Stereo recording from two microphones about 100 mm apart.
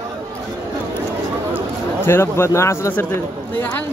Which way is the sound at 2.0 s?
25° left (ahead or behind).